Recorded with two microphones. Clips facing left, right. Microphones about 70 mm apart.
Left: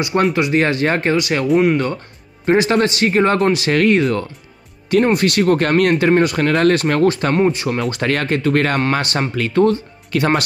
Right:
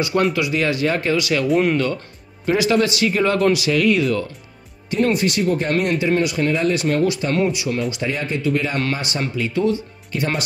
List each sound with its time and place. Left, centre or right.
0.3 s speech: left
1.5 s speech: centre
2.4 s speech: left
5.1 s speech: left
7.3 s speech: left